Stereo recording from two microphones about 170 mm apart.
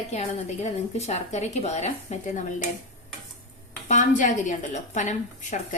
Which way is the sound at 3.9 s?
45° left (ahead or behind).